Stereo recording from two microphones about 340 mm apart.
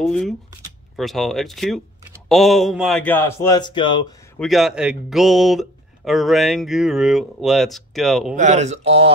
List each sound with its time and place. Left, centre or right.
0.0 s speech: centre
4.4 s speech: centre
8.4 s speech: right